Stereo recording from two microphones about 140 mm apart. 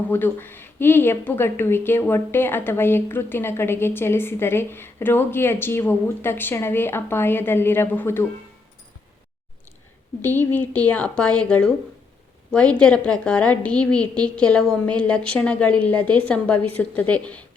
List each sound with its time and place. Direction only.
0.1 s a woman's voice: 15° left (ahead or behind)
10.2 s a woman's voice: 15° left (ahead or behind)